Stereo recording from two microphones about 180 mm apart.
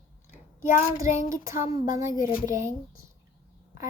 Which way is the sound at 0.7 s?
15° right (ahead or behind).